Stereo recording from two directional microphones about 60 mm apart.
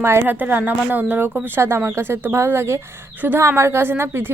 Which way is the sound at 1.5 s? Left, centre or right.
Right.